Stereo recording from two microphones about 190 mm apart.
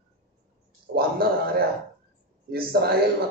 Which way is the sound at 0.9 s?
50° right (ahead or behind).